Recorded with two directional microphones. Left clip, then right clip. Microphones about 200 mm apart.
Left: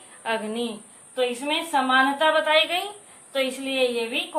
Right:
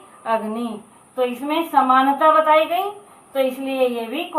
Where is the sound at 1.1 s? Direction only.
25° left (ahead or behind).